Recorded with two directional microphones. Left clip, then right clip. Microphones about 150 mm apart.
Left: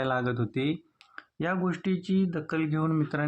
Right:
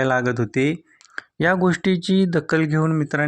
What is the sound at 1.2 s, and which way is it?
Speech, 55° right (ahead or behind).